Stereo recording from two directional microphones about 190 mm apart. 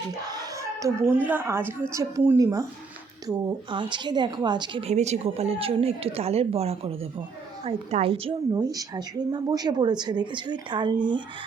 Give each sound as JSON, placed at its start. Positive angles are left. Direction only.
{"t": 0.3, "sound": "a woman's voice", "side_deg": -20}